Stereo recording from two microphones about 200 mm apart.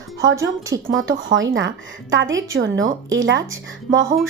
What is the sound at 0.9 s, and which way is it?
A woman's voice, 75° right (ahead or behind).